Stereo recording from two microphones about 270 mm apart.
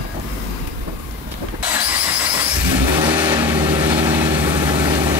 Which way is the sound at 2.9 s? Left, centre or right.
Centre.